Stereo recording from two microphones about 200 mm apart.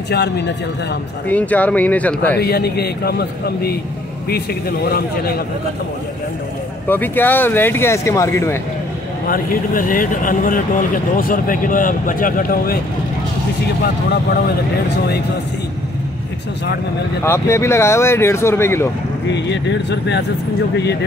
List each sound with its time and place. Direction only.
1.3 s speech: 10° left (ahead or behind)
2.4 s speech: 55° left (ahead or behind)
6.9 s speech: 10° left (ahead or behind)
9.3 s speech: 45° left (ahead or behind)
17.2 s speech: 10° left (ahead or behind)
19.3 s speech: 60° left (ahead or behind)